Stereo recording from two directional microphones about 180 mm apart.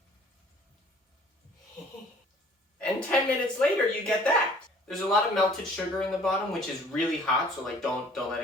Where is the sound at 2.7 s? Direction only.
5° left (ahead or behind).